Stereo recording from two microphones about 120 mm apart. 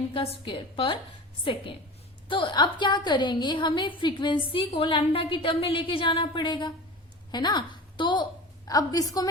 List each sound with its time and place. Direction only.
0.1 s a woman's voice: 45° left (ahead or behind)
2.3 s a woman's voice: 40° left (ahead or behind)